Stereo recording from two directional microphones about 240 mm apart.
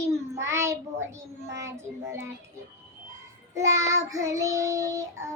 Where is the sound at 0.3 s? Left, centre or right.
Centre.